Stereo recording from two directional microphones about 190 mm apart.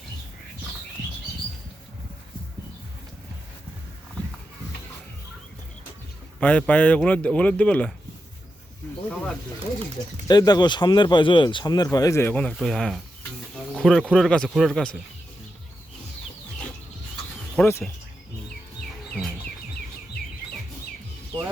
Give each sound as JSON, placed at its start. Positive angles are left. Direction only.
{"t": 6.4, "sound": "speech", "side_deg": 10}
{"t": 9.0, "sound": "speech", "side_deg": 0}
{"t": 10.2, "sound": "speech", "side_deg": 20}
{"t": 17.6, "sound": "speech", "side_deg": 10}